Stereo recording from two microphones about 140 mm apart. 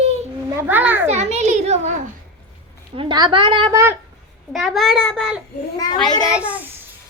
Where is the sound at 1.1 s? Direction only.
50° right (ahead or behind).